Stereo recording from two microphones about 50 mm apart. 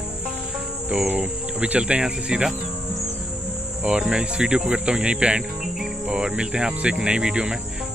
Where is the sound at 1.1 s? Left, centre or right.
Right.